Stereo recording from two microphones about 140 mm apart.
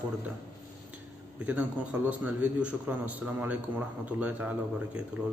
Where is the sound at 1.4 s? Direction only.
10° right (ahead or behind).